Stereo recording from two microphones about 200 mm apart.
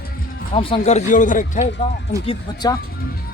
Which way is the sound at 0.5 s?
25° left (ahead or behind).